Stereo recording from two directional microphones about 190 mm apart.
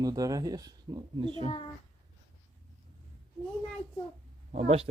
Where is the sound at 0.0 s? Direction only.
20° right (ahead or behind).